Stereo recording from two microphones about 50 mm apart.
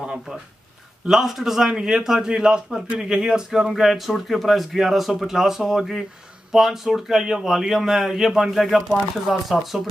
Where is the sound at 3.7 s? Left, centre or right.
Centre.